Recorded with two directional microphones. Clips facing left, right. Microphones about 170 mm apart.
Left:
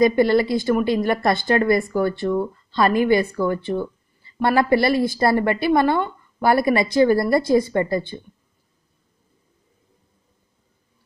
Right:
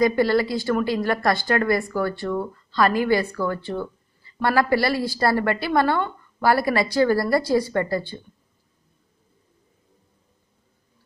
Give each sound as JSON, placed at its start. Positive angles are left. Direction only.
{"t": 0.0, "sound": "speech", "side_deg": 20}